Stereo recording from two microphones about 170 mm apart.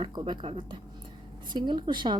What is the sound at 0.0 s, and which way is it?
A woman's voice, 25° right (ahead or behind).